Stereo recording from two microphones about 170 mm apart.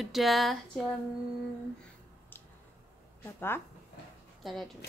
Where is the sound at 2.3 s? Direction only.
10° left (ahead or behind).